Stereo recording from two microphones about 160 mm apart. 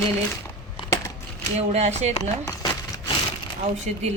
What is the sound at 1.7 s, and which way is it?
Speech, 45° right (ahead or behind).